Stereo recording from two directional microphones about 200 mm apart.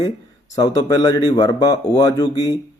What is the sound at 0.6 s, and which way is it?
Speech, 20° left (ahead or behind).